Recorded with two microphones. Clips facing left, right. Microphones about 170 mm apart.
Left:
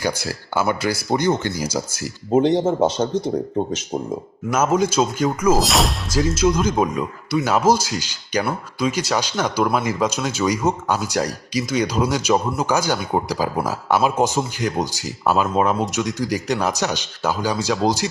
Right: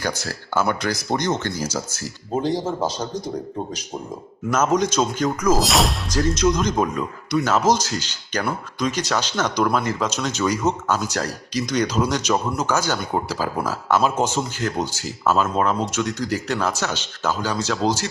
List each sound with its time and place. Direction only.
0.0 s speech: 10° left (ahead or behind)
2.5 s speech: 25° left (ahead or behind)
4.5 s speech: 10° left (ahead or behind)